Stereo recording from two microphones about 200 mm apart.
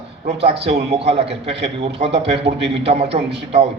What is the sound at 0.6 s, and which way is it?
A man's voice, 30° right (ahead or behind).